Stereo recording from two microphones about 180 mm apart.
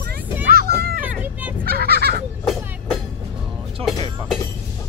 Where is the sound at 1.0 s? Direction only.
10° right (ahead or behind).